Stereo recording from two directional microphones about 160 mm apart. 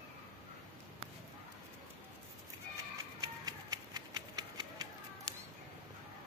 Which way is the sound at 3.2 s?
25° right (ahead or behind).